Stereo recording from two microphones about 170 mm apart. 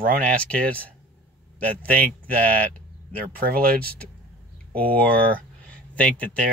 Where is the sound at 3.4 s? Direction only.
60° right (ahead or behind).